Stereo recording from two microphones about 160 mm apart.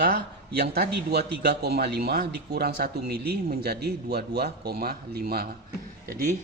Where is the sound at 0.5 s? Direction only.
90° right; by 5.5 s 75° right (ahead or behind).